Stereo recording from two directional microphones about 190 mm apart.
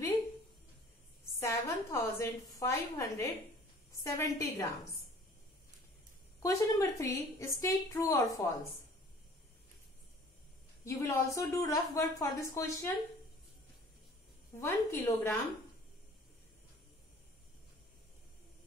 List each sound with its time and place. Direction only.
1.4 s a woman's voice: 15° left (ahead or behind)
6.4 s a woman's voice: 15° left (ahead or behind)
10.9 s a woman's voice: 15° left (ahead or behind)
14.6 s a woman's voice: 15° left (ahead or behind)